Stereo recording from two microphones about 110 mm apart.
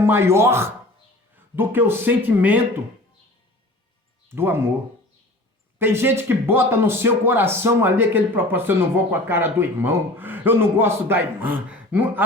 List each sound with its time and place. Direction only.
0.0 s speech: 20° right (ahead or behind)
4.4 s speech: 20° right (ahead or behind)
5.8 s speech: 20° right (ahead or behind)